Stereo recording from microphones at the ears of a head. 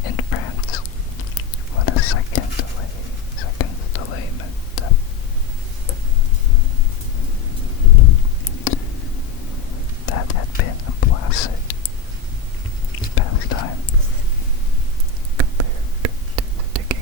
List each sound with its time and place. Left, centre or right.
0.0 s whispering: left
7.9 s a sound: left
10.1 s whispering: left
12.9 s whispering: left
16.0 s whispering: right